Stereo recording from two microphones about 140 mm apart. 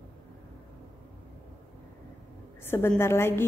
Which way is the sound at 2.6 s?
15° left (ahead or behind).